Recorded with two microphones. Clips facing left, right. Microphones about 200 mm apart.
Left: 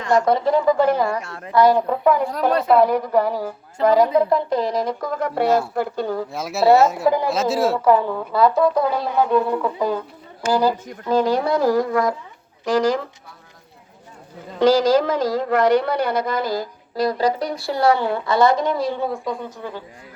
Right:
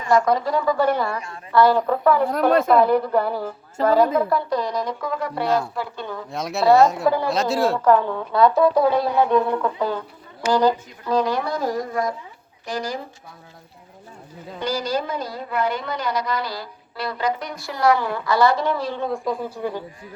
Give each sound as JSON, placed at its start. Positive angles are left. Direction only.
{"t": 0.3, "sound": "a woman's voice", "side_deg": 25}
{"t": 2.3, "sound": "speech", "side_deg": -50}
{"t": 2.7, "sound": "a woman's voice", "side_deg": 10}
{"t": 4.9, "sound": "speech", "side_deg": 40}
{"t": 5.5, "sound": "speech", "side_deg": 5}
{"t": 5.7, "sound": "speech", "side_deg": 45}
{"t": 6.3, "sound": "speech", "side_deg": 5}
{"t": 11.0, "sound": "a woman's voice", "side_deg": 25}
{"t": 11.6, "sound": "speech", "side_deg": 70}
{"t": 12.6, "sound": "speech", "side_deg": 90}
{"t": 14.6, "sound": "speech", "side_deg": 90}
{"t": 19.1, "sound": "speech", "side_deg": 0}